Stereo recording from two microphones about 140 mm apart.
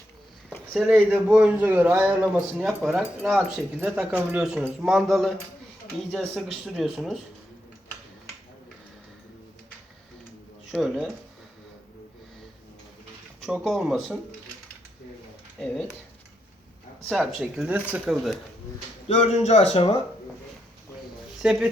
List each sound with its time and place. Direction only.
0.7 s speech: 10° right (ahead or behind)
10.7 s speech: 5° right (ahead or behind)
13.4 s speech: centre (ahead or behind)
15.5 s speech: 5° left (ahead or behind)
17.1 s speech: centre (ahead or behind)
19.0 s speech: 55° left (ahead or behind)
21.4 s speech: 5° right (ahead or behind)